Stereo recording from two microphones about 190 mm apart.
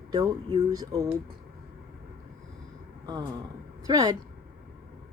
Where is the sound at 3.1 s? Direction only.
20° right (ahead or behind).